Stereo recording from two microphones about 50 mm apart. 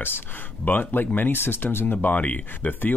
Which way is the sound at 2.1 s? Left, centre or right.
Left.